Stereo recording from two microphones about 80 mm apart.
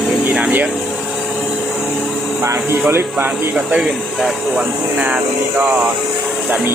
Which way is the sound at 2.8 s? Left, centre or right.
Right.